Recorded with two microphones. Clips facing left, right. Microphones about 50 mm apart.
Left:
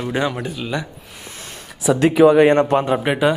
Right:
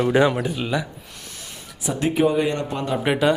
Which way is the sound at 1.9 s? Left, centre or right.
Left.